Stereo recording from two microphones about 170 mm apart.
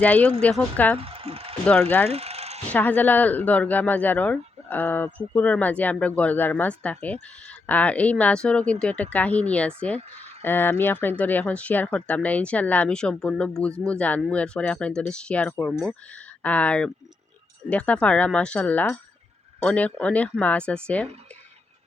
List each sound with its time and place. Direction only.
0.0 s speech: 10° left (ahead or behind)
0.9 s ratchet: 35° right (ahead or behind)
2.0 s mechanisms: 35° right (ahead or behind)
2.6 s speech: 10° left (ahead or behind)